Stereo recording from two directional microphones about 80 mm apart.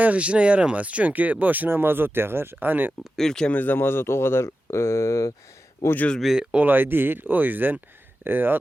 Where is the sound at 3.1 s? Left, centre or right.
Centre.